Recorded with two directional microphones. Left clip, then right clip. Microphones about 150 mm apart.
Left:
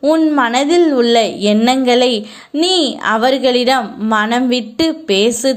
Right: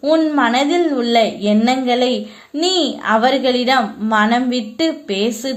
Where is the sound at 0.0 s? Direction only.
20° left (ahead or behind).